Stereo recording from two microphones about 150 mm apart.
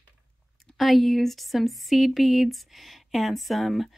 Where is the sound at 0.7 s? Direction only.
Centre (ahead or behind).